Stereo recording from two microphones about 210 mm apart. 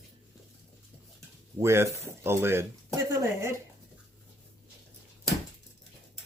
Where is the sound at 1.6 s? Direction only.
10° right (ahead or behind).